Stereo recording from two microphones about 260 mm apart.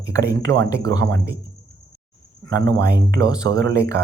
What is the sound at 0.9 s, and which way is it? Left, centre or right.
Speech, right.